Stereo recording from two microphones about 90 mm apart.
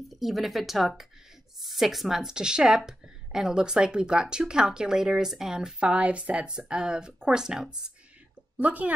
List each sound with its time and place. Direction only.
0.1 s a woman's voice: centre (ahead or behind)
8.5 s a woman's voice: 15° right (ahead or behind)